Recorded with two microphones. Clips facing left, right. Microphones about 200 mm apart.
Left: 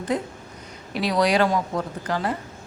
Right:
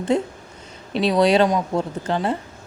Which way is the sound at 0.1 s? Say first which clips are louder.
Right 5 dB; 25° right (ahead or behind).